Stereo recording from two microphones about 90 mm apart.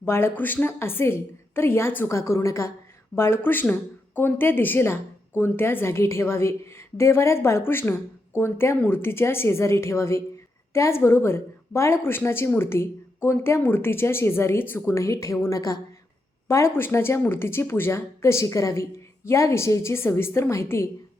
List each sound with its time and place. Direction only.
0.0 s a woman's voice: 25° left (ahead or behind)